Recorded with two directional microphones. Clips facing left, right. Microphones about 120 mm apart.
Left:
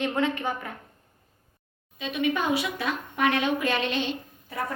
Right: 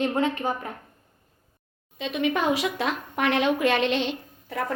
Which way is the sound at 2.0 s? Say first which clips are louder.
Right 2 dB; 75° right (ahead or behind).